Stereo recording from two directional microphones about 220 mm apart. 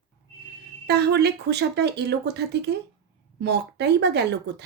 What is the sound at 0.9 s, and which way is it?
Speech, 50° right (ahead or behind).